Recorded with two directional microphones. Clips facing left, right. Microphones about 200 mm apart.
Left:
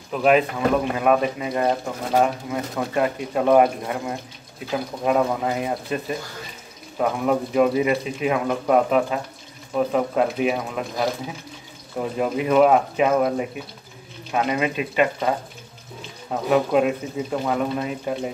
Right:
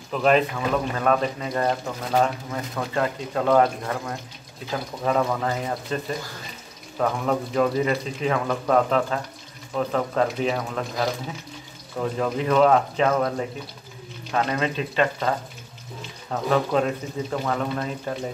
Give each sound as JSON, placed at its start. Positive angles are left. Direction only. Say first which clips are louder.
{"t": 0.1, "sound": "speech", "louder": "left 2 dB", "side_deg": 5}